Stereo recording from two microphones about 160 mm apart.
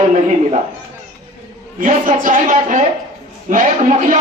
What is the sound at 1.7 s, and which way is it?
A man's voice, 55° right (ahead or behind).